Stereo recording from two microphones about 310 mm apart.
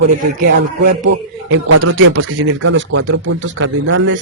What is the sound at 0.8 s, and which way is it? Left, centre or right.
Speech, right.